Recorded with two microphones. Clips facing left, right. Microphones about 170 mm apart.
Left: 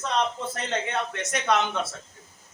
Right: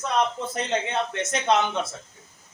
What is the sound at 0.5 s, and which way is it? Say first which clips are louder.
Speech: right 3 dB; 20° right (ahead or behind).